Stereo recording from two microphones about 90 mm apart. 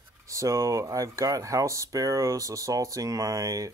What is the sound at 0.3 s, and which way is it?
Speech, 35° right (ahead or behind).